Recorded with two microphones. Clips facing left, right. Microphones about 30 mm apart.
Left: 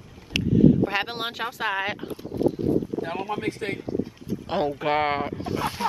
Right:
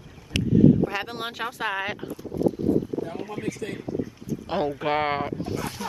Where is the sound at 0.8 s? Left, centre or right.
Left.